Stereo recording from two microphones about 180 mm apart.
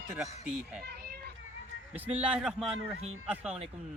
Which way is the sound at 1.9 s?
10° right (ahead or behind).